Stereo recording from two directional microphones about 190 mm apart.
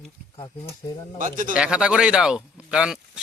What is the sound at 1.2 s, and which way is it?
Speech, 45° right (ahead or behind).